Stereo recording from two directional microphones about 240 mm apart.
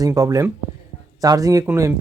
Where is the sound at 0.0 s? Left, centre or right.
Centre.